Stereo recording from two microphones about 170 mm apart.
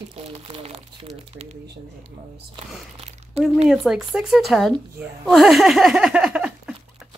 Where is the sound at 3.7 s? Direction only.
Centre (ahead or behind).